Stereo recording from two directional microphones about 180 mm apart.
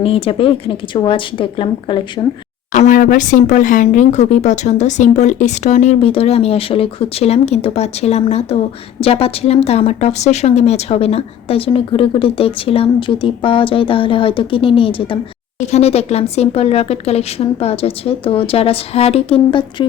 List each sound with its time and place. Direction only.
0.0 s speech: 30° left (ahead or behind)
2.7 s speech: 45° left (ahead or behind); by 19.9 s 25° left (ahead or behind)